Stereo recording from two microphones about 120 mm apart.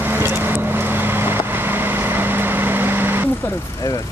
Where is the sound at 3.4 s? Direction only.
30° left (ahead or behind).